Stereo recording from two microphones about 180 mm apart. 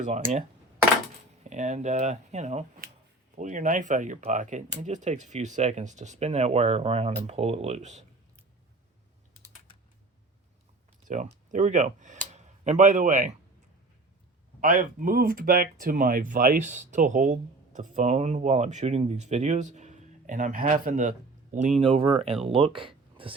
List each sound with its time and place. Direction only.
0.0 s speech: 40° right (ahead or behind)
1.5 s speech: 40° right (ahead or behind)
11.1 s speech: 45° right (ahead or behind)
14.6 s speech: 50° right (ahead or behind)
21.8 s speech: 30° right (ahead or behind)